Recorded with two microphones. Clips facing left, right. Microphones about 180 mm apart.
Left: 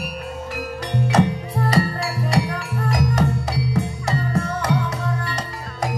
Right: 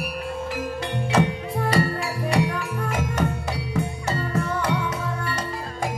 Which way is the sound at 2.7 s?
40° left (ahead or behind).